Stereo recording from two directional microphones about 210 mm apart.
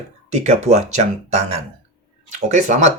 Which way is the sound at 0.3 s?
35° right (ahead or behind).